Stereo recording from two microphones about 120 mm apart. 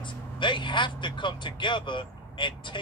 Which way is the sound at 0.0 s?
40° left (ahead or behind).